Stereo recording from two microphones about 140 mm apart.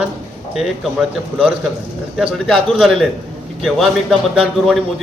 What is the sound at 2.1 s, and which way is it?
A man's voice, centre (ahead or behind).